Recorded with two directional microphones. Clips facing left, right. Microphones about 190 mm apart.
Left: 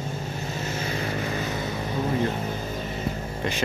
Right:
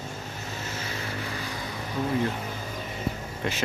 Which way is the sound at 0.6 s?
20° left (ahead or behind).